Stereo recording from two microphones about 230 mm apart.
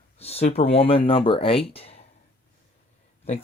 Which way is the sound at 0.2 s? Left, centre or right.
Left.